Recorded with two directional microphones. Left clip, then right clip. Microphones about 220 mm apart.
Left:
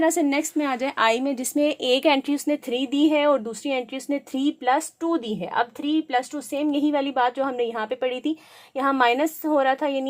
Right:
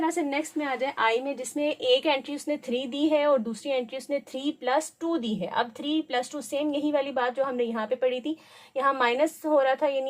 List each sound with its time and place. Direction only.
0.0 s a woman's voice: 50° left (ahead or behind)